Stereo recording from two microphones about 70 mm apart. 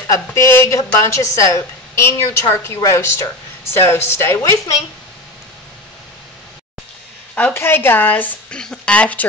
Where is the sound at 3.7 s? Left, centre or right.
Left.